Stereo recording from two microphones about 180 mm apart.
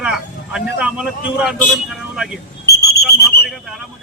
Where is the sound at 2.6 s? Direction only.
60° left (ahead or behind).